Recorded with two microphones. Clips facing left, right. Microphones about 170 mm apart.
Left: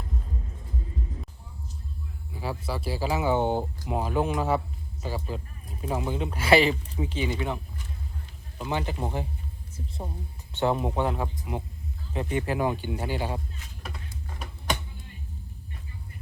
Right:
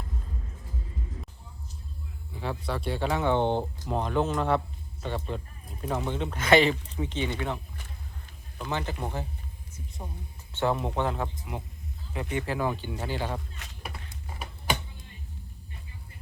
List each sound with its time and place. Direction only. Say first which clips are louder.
2.4 s speech: even; 5° left (ahead or behind)
8.5 s speech: left 2 dB; 15° left (ahead or behind)
10.5 s speech: left 2 dB; 15° left (ahead or behind)
11.5 s speech: left 4 dB; 25° left (ahead or behind)
13.6 s a sound: right 1 dB; 75° right (ahead or behind)